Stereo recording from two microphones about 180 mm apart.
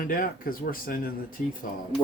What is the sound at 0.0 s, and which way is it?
Speech, 50° left (ahead or behind).